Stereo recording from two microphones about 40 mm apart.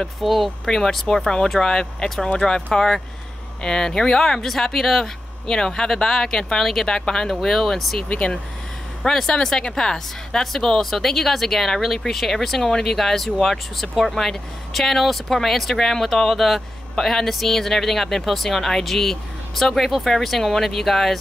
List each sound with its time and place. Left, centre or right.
0.2 s speech: centre
0.7 s speech: centre
8.1 s speech: left
9.0 s speech: centre